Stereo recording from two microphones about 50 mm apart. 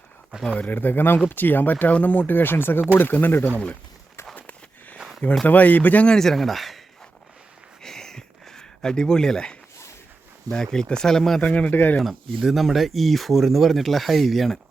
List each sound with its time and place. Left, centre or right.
0.5 s speech: left
4.4 s a sound: left
4.9 s a sound: centre
5.5 s speech: left
6.1 s speech: centre
7.8 s a sound: centre
10.5 s speech: centre
11.4 s speech: left
11.7 s speech: left
12.0 s speech: centre